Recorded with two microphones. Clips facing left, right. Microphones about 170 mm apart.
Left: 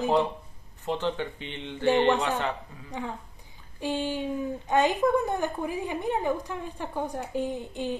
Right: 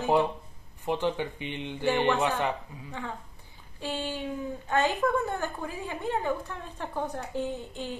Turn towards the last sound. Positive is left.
turn(degrees=15)  # may be behind; listen again after turning